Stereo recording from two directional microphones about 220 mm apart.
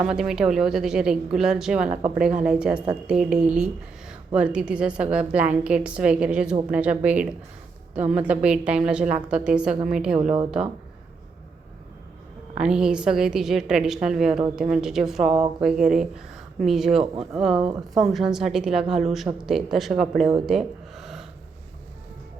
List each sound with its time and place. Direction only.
0.0 s a woman's voice: 5° right (ahead or behind)
10.2 s speech: 30° right (ahead or behind)
12.5 s a woman's voice: 5° right (ahead or behind)
20.5 s a sound: centre (ahead or behind)